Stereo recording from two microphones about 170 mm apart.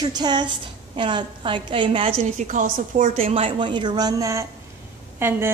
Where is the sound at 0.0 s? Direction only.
25° right (ahead or behind).